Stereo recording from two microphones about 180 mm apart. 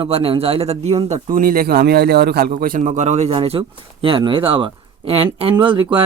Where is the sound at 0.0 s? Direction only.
30° right (ahead or behind).